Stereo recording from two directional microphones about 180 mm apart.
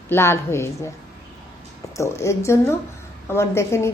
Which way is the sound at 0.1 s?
15° left (ahead or behind).